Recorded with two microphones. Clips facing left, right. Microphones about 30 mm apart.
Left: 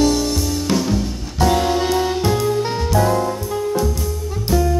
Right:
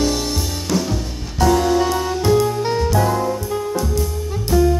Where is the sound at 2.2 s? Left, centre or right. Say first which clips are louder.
Right 1 dB; centre.